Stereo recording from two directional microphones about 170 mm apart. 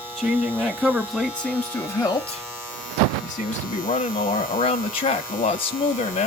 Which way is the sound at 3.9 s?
55° left (ahead or behind).